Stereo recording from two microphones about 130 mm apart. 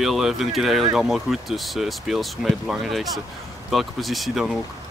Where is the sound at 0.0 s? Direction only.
Centre (ahead or behind).